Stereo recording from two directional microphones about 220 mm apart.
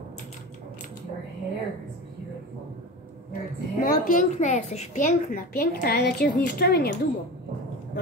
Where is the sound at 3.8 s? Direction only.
40° left (ahead or behind).